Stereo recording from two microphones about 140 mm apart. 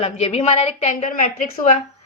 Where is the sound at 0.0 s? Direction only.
45° left (ahead or behind); by 1.3 s 70° left (ahead or behind).